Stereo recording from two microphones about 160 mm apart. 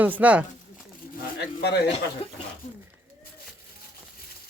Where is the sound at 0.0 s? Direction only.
10° right (ahead or behind).